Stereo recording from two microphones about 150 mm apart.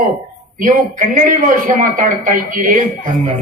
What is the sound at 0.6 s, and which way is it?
A man's voice, 60° right (ahead or behind).